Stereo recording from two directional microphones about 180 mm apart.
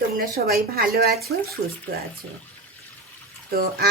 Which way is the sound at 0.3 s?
55° right (ahead or behind).